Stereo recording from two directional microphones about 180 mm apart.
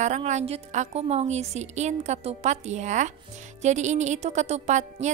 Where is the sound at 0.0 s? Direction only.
40° right (ahead or behind).